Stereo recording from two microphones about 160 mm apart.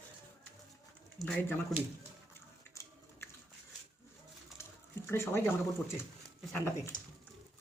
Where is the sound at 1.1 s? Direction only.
5° left (ahead or behind).